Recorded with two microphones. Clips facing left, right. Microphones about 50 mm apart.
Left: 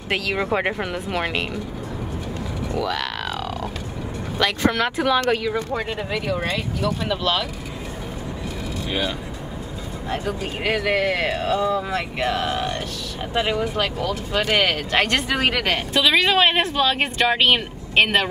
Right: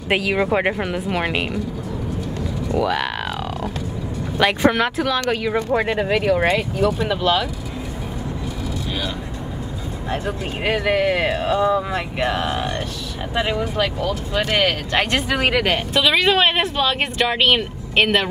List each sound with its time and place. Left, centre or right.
0.1 s speech: centre
2.8 s a sound: centre
4.4 s speech: centre
4.8 s a woman's voice: centre
5.8 s speech: right
7.1 s speech: centre
10.2 s speech: centre
13.3 s a woman's voice: centre